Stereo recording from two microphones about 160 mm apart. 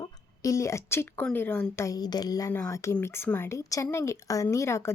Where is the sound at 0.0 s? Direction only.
20° left (ahead or behind).